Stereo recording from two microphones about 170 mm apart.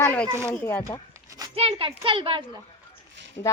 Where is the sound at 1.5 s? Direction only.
35° right (ahead or behind).